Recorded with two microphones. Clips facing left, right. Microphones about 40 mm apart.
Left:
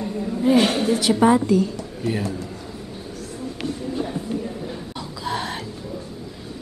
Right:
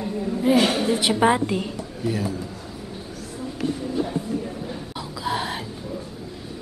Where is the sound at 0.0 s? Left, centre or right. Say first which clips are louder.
Left 1 dB; centre.